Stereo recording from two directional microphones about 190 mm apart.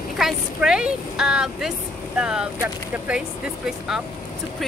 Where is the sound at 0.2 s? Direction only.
5° right (ahead or behind).